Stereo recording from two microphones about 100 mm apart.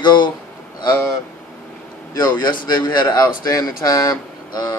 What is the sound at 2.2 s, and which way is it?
Speech, 45° left (ahead or behind).